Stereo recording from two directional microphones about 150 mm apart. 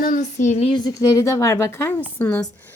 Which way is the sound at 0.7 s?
25° left (ahead or behind).